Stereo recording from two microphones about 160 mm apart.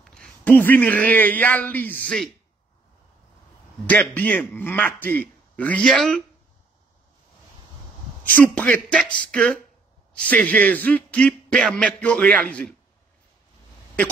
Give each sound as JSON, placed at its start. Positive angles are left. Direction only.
{"t": 0.0, "sound": "a man's voice", "side_deg": 5}
{"t": 3.8, "sound": "speech", "side_deg": 10}
{"t": 8.4, "sound": "speech", "side_deg": 10}